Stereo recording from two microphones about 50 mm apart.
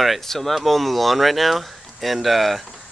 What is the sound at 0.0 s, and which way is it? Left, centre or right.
Speech, centre.